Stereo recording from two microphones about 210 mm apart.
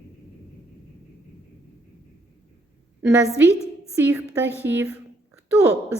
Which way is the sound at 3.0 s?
10° right (ahead or behind).